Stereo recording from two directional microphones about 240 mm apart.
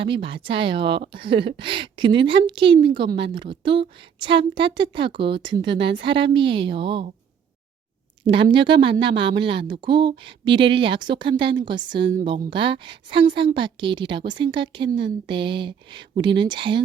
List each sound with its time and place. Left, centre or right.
0.0 s a woman's voice: right
8.3 s a woman's voice: right